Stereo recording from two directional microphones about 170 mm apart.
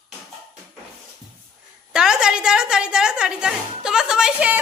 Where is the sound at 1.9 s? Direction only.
5° right (ahead or behind).